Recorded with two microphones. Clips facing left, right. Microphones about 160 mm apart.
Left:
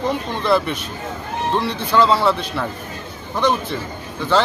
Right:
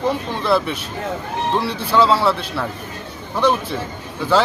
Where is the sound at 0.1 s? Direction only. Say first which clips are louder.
Left 2 dB; centre (ahead or behind).